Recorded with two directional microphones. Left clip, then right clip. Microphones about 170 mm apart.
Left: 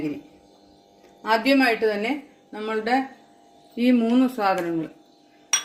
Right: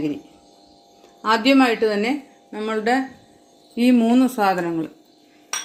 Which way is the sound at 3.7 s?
50° right (ahead or behind).